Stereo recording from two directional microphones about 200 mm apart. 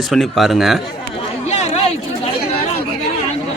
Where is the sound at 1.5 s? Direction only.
35° left (ahead or behind).